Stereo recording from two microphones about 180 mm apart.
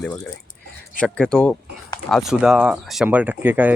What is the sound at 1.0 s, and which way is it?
Speech, 5° left (ahead or behind).